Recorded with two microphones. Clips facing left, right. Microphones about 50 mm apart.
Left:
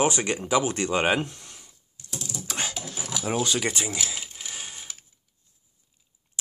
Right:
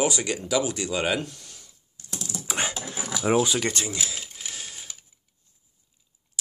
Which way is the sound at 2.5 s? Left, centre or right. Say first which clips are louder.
Right 4 dB; right.